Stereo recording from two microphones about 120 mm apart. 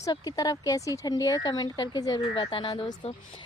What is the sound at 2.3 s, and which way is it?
Speech, 50° left (ahead or behind).